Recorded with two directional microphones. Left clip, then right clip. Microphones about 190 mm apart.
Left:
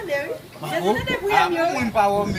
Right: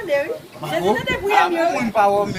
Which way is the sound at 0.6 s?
5° left (ahead or behind).